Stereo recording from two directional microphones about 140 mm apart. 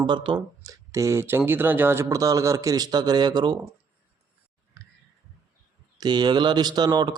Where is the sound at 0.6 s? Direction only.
25° right (ahead or behind).